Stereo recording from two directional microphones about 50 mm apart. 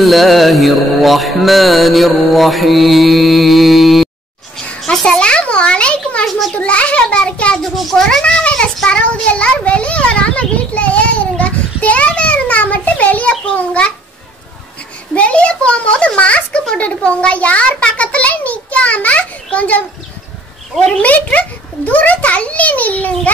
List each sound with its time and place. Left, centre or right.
0.0 s music: centre
5.0 s a sound: centre
6.5 s a child's voice: left
7.6 s music: centre
8.2 s a child's voice: centre
8.8 s a sound: left
15.1 s a child's voice: left
21.0 s a child's voice: left